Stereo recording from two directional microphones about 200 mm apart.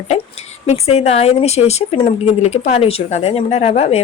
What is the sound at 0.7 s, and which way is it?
A woman's voice, 30° left (ahead or behind).